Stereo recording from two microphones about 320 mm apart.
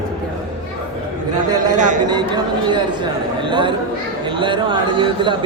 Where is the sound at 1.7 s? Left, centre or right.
Right.